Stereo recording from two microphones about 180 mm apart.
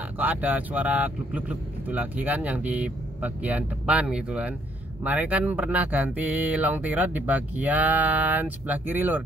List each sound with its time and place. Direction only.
0.2 s speech: 10° right (ahead or behind)